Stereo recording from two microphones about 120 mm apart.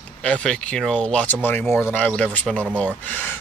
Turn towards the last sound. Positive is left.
turn(degrees=15)  # may be behind; listen again after turning